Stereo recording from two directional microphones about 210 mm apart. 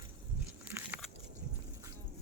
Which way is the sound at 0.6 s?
10° right (ahead or behind).